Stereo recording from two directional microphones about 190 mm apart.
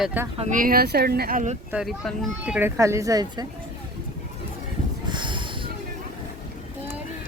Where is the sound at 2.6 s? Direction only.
15° right (ahead or behind).